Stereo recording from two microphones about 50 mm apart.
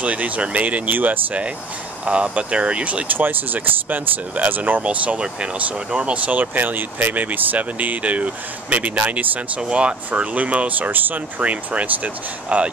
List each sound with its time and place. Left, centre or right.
0.0 s speech: right
2.0 s speech: right
4.8 s speech: right
9.6 s speech: right
10.9 s speech: right